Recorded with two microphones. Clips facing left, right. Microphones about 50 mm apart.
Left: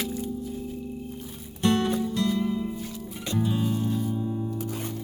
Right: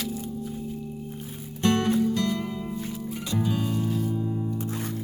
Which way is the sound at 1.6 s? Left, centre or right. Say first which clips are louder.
Right 1 dB; right.